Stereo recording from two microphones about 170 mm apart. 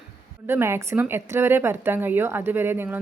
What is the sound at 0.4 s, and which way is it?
A woman's voice, 15° right (ahead or behind).